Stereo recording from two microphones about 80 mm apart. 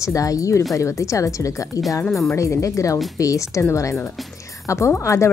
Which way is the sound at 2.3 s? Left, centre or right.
Left.